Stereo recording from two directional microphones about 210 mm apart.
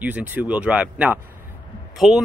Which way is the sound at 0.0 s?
5° right (ahead or behind).